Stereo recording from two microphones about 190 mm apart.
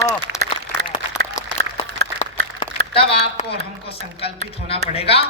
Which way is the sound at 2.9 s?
30° left (ahead or behind).